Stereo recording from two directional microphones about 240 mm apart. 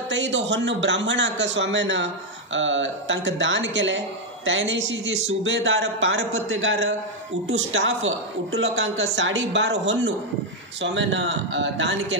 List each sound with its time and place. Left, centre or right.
0.1 s a man's voice: right